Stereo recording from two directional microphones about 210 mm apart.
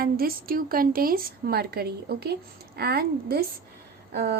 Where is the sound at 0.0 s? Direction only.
45° right (ahead or behind).